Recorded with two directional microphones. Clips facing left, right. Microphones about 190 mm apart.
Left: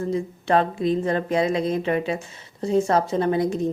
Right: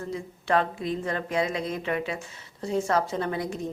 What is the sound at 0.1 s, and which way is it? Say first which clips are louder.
A woman's voice: left 3 dB; 25° left (ahead or behind).